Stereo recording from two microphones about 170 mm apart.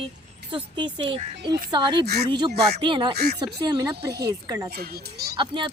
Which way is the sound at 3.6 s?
20° right (ahead or behind).